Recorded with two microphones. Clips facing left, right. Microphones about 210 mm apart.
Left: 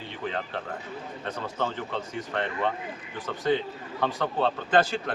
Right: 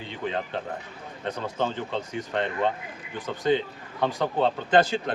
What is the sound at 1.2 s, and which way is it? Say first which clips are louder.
A man's voice: right 3 dB; 20° right (ahead or behind).